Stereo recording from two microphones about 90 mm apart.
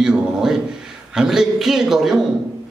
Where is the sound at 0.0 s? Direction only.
5° right (ahead or behind).